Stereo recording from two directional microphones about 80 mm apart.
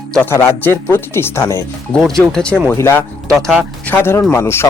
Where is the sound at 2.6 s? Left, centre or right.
Left.